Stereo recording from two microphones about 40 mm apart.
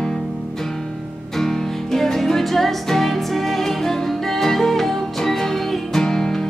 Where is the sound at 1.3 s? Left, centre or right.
Centre.